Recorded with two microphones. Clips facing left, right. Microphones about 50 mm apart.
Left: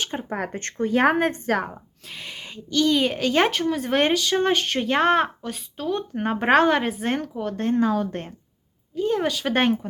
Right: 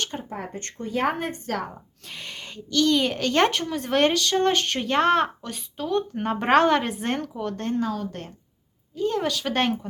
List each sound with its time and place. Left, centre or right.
0.3 s speech: left
0.5 s a woman's voice: left
1.7 s a woman's voice: centre
7.8 s a woman's voice: left
9.0 s a woman's voice: centre